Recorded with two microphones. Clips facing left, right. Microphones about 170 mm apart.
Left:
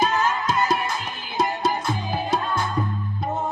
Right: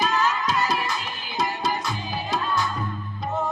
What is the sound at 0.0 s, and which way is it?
Music, 50° left (ahead or behind).